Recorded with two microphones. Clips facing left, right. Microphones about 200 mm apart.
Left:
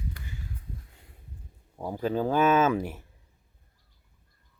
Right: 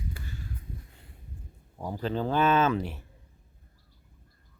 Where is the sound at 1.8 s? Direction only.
5° left (ahead or behind).